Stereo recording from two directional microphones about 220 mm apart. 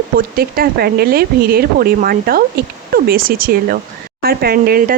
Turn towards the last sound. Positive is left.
turn(degrees=-40)  # may be behind; listen again after turning